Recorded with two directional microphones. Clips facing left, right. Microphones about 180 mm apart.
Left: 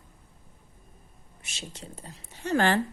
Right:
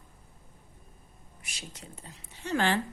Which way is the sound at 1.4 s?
25° left (ahead or behind).